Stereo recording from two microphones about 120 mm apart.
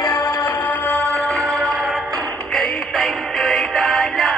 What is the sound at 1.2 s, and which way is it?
Music, centre (ahead or behind).